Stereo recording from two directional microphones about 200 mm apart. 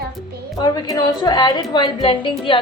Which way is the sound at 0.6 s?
20° left (ahead or behind).